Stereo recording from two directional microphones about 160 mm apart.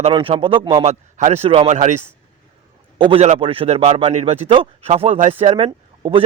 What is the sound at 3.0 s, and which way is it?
Speech, 35° right (ahead or behind).